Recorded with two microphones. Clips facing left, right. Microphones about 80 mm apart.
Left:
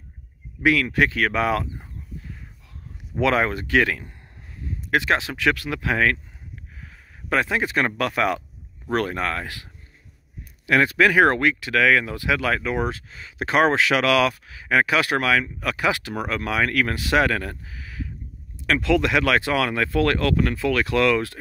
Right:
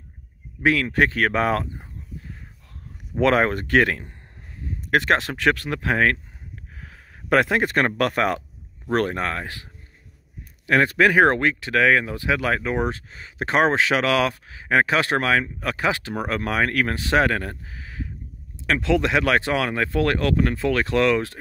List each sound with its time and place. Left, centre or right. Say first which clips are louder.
0.6 s speech: even; right
3.2 s speech: right 2 dB; right
6.8 s speech: right 1 dB; right
10.7 s speech: even; right